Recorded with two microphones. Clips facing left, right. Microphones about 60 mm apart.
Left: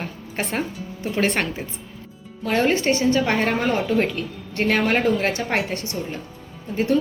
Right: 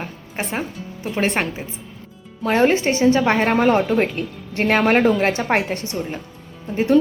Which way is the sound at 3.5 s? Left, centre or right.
Right.